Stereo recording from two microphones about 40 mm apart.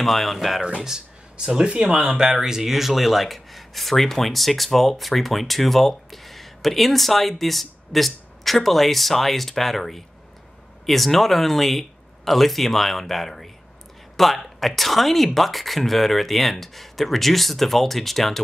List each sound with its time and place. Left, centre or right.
0.0 s speech: centre
0.8 s speech: centre
2.0 s speech: centre